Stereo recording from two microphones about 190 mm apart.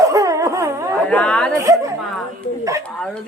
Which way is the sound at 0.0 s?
15° right (ahead or behind).